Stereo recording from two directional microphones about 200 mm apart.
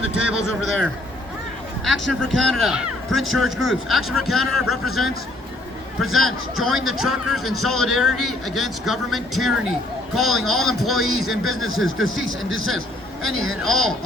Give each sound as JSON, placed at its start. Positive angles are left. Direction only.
{"t": 0.2, "sound": "a man's voice", "side_deg": -5}
{"t": 13.2, "sound": "speech", "side_deg": -90}
{"t": 13.5, "sound": "a man's voice", "side_deg": 0}